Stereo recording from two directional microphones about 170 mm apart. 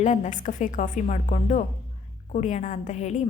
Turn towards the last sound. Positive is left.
turn(degrees=40)  # may be behind; listen again after turning